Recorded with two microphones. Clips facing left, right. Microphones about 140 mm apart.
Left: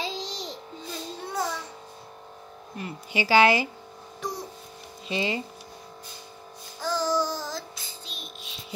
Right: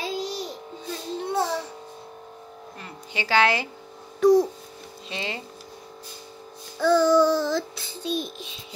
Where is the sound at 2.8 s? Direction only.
10° left (ahead or behind).